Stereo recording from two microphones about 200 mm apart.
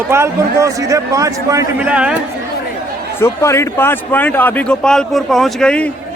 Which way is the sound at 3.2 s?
15° left (ahead or behind).